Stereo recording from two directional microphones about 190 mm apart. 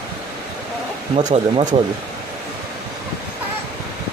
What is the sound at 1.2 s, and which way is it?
Speech, 35° right (ahead or behind).